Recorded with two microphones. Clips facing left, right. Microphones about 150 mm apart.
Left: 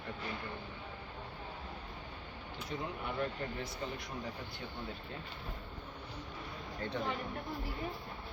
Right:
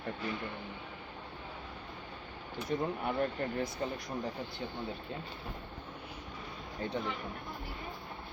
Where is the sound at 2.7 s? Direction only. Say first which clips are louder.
Right 6 dB; 50° right (ahead or behind).